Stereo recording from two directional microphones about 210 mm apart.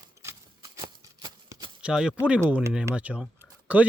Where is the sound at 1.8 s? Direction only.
5° right (ahead or behind).